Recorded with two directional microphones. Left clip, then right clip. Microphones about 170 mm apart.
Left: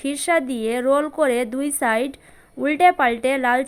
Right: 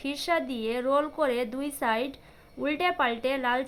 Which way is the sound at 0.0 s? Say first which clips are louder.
Left 8 dB; 35° left (ahead or behind).